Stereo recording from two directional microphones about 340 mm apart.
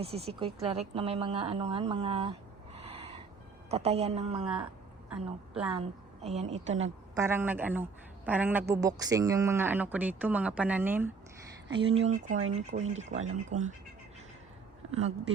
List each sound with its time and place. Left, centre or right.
0.0 s speech: centre
2.7 s owl: centre
3.7 s speech: centre
5.0 s a woman's voice: centre
6.2 s speech: centre
6.7 s a woman's voice: right
7.2 s speech: centre
11.8 s speech: centre